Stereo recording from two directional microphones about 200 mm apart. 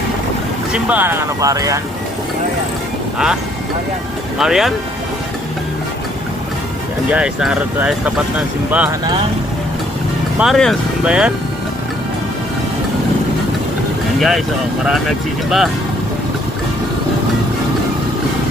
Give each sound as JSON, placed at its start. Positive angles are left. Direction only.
{"t": 0.7, "sound": "speech", "side_deg": -5}
{"t": 4.4, "sound": "speech", "side_deg": 0}
{"t": 7.1, "sound": "speech", "side_deg": -5}
{"t": 10.3, "sound": "speech", "side_deg": 0}
{"t": 14.2, "sound": "speech", "side_deg": 0}